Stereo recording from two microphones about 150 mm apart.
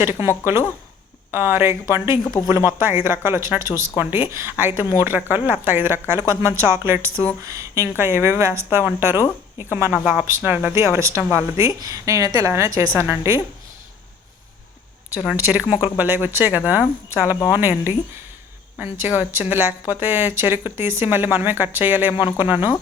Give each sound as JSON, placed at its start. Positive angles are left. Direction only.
{"t": 0.0, "sound": "speech", "side_deg": -15}
{"t": 2.2, "sound": "speech", "side_deg": 25}
{"t": 2.5, "sound": "a woman's voice", "side_deg": -15}
{"t": 15.5, "sound": "speech", "side_deg": -10}